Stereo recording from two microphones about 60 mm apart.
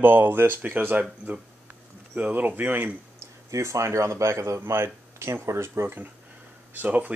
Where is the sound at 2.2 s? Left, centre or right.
Right.